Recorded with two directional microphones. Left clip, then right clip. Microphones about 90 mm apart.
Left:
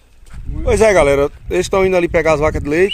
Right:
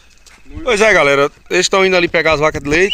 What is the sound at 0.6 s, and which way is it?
Speech, 55° left (ahead or behind).